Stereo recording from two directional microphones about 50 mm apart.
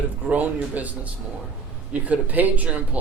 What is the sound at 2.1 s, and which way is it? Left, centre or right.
Speech, right.